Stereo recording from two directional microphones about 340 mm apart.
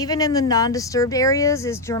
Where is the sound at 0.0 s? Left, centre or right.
Centre.